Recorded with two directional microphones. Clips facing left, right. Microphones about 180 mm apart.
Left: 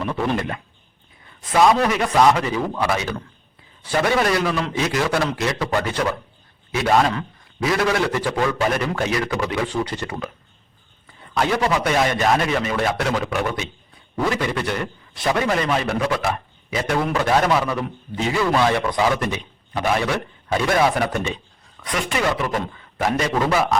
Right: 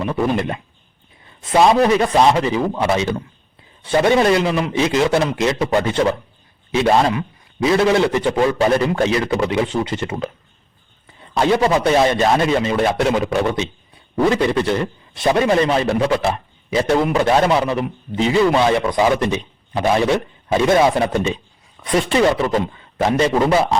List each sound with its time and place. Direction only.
0.0 s a man's voice: 20° right (ahead or behind)